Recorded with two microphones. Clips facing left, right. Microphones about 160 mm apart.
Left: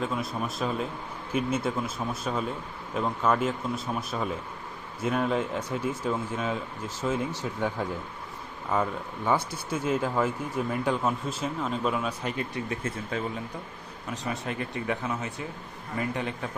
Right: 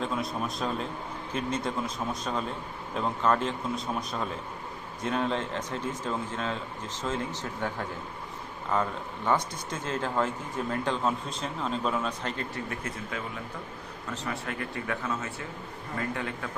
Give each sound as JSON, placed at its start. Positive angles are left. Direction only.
{"t": 0.0, "sound": "speech", "side_deg": 0}
{"t": 2.9, "sound": "speech", "side_deg": 5}
{"t": 12.8, "sound": "speech", "side_deg": 30}
{"t": 14.1, "sound": "speech", "side_deg": 20}